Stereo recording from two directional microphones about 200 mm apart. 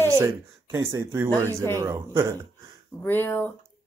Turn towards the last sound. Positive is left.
turn(degrees=10)  # may be behind; listen again after turning